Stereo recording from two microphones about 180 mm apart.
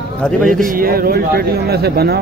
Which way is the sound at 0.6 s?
55° right (ahead or behind).